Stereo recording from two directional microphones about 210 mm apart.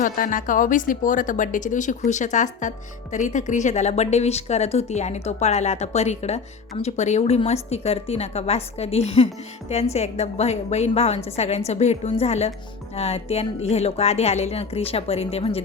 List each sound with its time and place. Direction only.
0.0 s a woman's voice: 40° left (ahead or behind)